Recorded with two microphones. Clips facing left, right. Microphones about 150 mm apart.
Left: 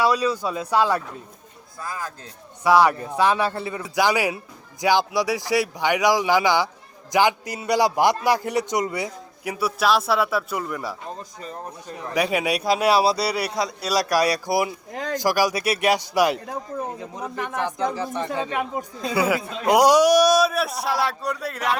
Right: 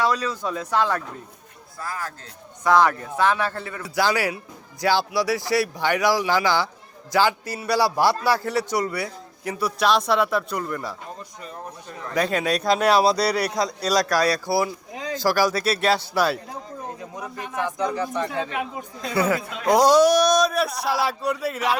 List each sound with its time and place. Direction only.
0.0 s a man's voice: 10° left (ahead or behind)
12.1 s a man's voice: 10° left (ahead or behind)
17.6 s speech: 30° left (ahead or behind)
18.3 s speech: 45° left (ahead or behind)
19.0 s a man's voice: 10° left (ahead or behind)